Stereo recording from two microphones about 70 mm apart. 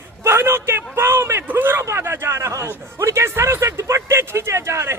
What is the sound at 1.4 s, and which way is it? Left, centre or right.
A man's voice, right.